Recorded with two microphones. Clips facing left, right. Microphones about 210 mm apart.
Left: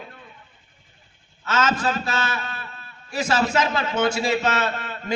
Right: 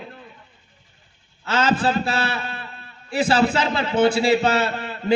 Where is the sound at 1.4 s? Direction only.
30° right (ahead or behind).